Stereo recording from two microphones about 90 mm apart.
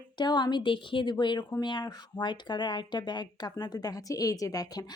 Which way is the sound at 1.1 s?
55° left (ahead or behind).